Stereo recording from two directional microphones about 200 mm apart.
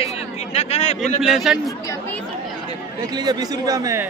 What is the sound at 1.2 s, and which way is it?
Speech, centre (ahead or behind).